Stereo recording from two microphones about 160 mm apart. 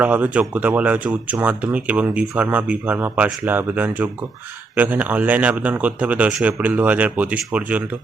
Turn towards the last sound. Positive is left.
turn(degrees=-10)  # may be behind; listen again after turning